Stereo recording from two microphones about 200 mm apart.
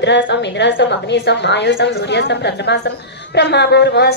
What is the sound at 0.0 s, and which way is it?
A woman's voice, 60° left (ahead or behind).